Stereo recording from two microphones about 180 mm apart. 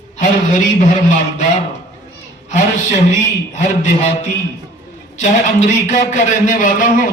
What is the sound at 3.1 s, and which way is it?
A man's voice, 40° left (ahead or behind).